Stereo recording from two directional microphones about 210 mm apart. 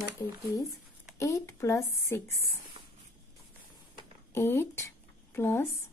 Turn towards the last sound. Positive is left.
turn(degrees=10)  # may be behind; listen again after turning